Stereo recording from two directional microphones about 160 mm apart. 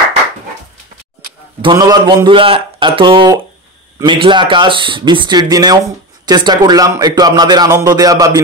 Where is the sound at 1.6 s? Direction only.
25° right (ahead or behind).